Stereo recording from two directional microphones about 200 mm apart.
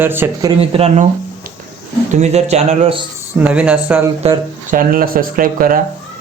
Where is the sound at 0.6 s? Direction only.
30° right (ahead or behind).